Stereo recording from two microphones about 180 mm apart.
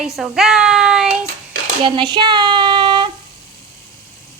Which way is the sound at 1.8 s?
25° right (ahead or behind).